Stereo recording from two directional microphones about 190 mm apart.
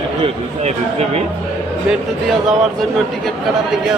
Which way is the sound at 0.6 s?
35° right (ahead or behind).